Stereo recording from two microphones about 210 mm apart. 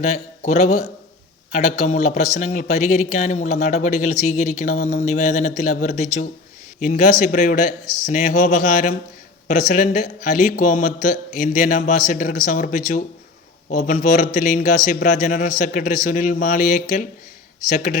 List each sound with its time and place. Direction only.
0.0 s speech: 30° left (ahead or behind)